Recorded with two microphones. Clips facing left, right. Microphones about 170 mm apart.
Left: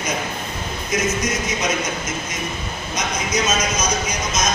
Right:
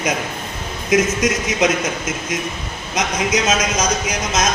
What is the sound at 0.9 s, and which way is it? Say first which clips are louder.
Speech: right 6 dB; 85° right.